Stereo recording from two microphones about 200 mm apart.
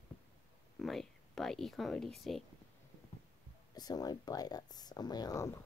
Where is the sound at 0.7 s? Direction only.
Centre (ahead or behind).